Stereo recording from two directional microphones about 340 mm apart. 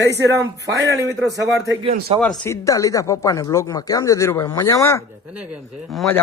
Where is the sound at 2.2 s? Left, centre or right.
Centre.